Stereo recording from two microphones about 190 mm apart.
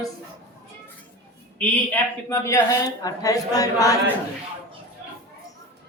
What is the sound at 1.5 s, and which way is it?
A woman's voice, 10° left (ahead or behind).